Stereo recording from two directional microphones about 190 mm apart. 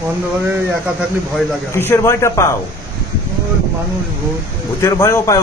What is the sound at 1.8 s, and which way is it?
Speech, 15° left (ahead or behind).